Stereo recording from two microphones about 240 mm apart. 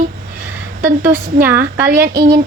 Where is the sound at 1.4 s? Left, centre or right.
Centre.